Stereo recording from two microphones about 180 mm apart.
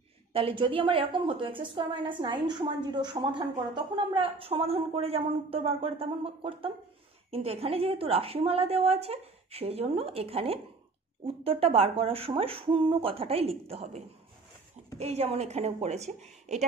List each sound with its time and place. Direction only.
0.3 s a woman's voice: 30° right (ahead or behind)